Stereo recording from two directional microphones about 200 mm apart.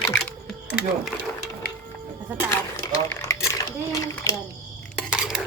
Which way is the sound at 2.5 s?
15° left (ahead or behind).